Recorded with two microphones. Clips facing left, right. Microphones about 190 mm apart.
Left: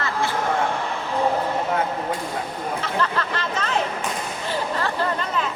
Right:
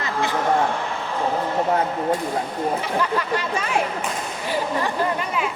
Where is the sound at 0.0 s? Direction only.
20° right (ahead or behind).